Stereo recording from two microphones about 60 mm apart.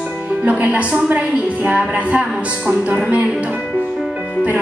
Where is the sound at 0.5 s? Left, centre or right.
Right.